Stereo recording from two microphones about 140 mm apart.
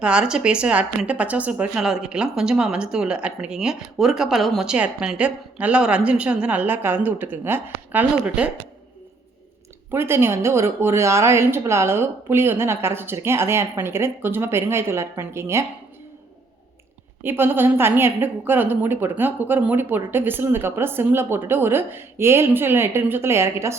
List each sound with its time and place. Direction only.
0.0 s a woman's voice: 5° right (ahead or behind)
9.9 s a woman's voice: 15° right (ahead or behind)
17.2 s a woman's voice: 15° right (ahead or behind)